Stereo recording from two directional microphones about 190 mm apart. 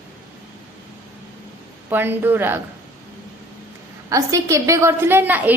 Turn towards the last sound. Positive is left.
turn(degrees=-10)  # may be behind; listen again after turning